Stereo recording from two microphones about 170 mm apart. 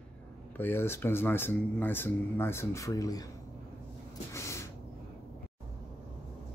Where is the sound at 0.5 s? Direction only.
15° left (ahead or behind).